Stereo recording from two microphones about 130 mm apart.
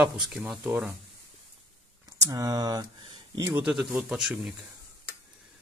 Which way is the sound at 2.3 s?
30° right (ahead or behind).